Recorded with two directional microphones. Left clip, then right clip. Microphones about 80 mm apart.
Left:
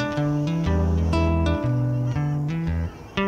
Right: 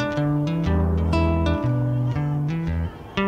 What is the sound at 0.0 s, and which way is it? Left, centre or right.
Music, right.